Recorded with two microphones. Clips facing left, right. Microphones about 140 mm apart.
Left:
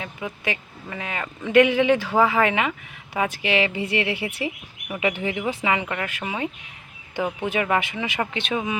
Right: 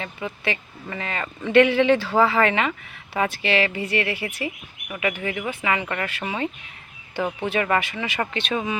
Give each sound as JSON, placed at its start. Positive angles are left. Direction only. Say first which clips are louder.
{"t": 0.0, "sound": "speech", "louder": "right 1 dB", "side_deg": 10}